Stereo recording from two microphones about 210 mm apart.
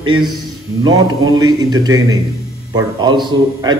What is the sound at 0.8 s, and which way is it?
A man's voice, 20° right (ahead or behind).